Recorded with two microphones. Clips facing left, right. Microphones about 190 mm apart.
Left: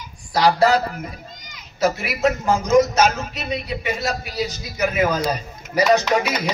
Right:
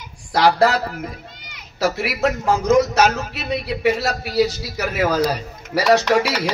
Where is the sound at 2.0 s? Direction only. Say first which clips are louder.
Even; 70° right (ahead or behind).